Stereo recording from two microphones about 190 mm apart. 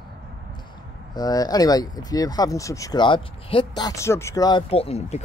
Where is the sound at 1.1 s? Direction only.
20° left (ahead or behind).